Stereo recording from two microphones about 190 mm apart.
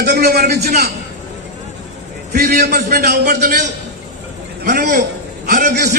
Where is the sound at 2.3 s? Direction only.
55° right (ahead or behind).